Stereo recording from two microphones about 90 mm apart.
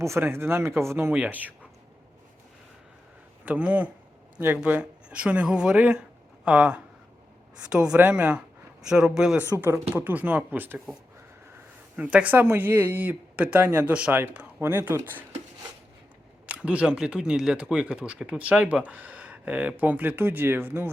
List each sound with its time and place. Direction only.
0.0 s speech: 30° right (ahead or behind)
1.1 s speech: 15° right (ahead or behind)
3.4 s speech: 15° right (ahead or behind)
9.6 s speech: 25° right (ahead or behind)
11.9 s speech: 15° right (ahead or behind)
14.6 s speech: 25° right (ahead or behind)
16.5 s speech: 15° right (ahead or behind)